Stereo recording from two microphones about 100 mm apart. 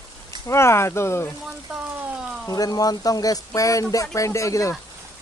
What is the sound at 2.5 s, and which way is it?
Speech, 40° left (ahead or behind).